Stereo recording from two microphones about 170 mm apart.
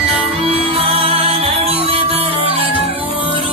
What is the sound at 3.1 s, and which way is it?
Music, 30° left (ahead or behind).